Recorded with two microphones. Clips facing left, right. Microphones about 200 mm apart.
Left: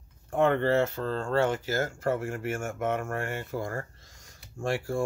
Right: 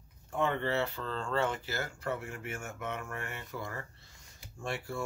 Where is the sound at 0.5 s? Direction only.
45° left (ahead or behind).